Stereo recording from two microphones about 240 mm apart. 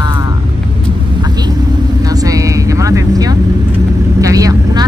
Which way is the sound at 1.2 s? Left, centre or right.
Centre.